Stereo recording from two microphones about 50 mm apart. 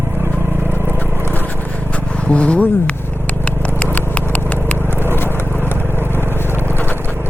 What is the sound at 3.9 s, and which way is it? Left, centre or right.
Horse, left.